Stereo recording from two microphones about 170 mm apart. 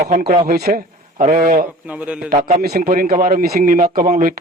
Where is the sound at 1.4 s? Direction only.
55° right (ahead or behind).